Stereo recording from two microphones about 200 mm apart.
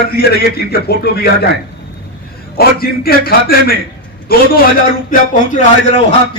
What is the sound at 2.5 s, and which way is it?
A man's voice, 50° left (ahead or behind).